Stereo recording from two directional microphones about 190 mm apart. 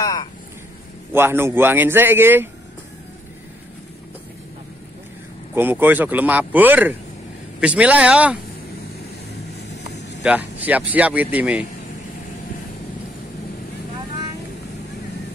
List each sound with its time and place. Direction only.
0.0 s vehicle: 20° left (ahead or behind)
1.1 s speech: 10° right (ahead or behind)
5.5 s speech: 10° right (ahead or behind)
10.2 s speech: 5° right (ahead or behind)